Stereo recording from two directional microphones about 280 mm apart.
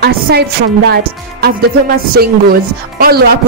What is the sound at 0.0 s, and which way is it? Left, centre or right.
Speech, right.